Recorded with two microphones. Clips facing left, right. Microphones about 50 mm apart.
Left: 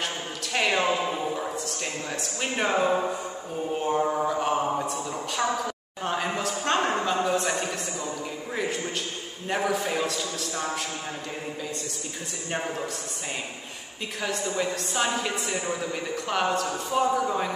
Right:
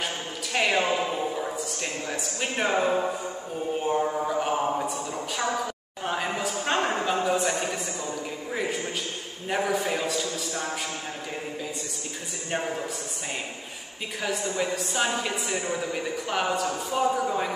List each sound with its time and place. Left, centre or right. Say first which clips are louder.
0.0 s a sound: even; centre
3.8 s mantra: left 2 dB; centre
4.3 s a sound: even; centre
9.5 s a woman's voice: even; centre
12.4 s a woman's voice: right 1 dB; centre
14.2 s a woman's voice: even; centre